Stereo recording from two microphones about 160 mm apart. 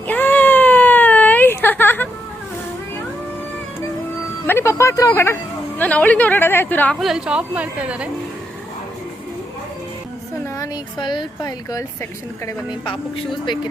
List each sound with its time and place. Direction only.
0.1 s baby cry: 10° left (ahead or behind)
4.4 s a sound: 15° left (ahead or behind)
5.8 s a woman's voice: 10° left (ahead or behind)
7.0 s a woman's voice: 5° right (ahead or behind)
10.6 s speech: 30° left (ahead or behind)